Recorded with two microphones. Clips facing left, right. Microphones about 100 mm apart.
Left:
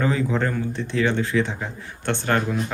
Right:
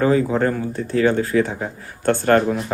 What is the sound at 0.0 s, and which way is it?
Speech, 40° right (ahead or behind).